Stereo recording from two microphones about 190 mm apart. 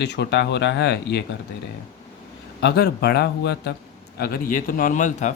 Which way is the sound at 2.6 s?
55° left (ahead or behind).